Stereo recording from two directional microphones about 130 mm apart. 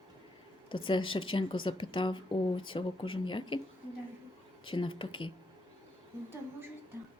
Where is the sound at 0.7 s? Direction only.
40° left (ahead or behind).